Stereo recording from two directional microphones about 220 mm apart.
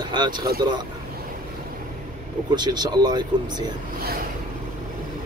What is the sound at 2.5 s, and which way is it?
Speech, 20° right (ahead or behind).